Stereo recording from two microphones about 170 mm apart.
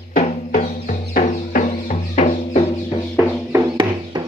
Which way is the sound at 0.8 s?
60° left (ahead or behind).